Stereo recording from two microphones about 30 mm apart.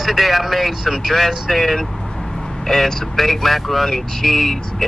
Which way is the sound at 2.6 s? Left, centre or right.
Centre.